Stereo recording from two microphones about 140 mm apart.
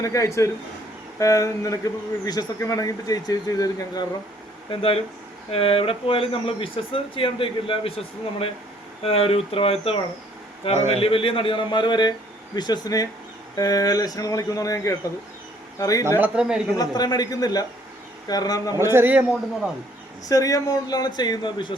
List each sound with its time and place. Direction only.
0.0 s speech: 20° left (ahead or behind)
4.7 s speech: 45° left (ahead or behind); by 16.0 s 25° left (ahead or behind)
16.0 s speech: 15° right (ahead or behind)
16.7 s speech: 30° left (ahead or behind)
18.8 s speech: 15° right (ahead or behind)
20.2 s speech: 25° left (ahead or behind)